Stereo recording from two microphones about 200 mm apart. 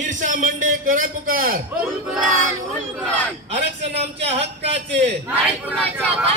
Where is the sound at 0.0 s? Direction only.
40° right (ahead or behind).